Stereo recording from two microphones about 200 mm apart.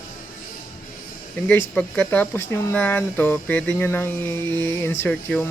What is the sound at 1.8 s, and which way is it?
Speech, 10° left (ahead or behind).